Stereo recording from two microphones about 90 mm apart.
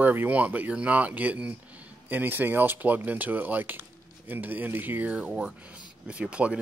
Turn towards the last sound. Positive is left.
turn(degrees=-15)  # may be behind; listen again after turning